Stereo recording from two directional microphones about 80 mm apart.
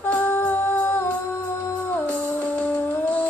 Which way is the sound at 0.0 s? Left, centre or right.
Left.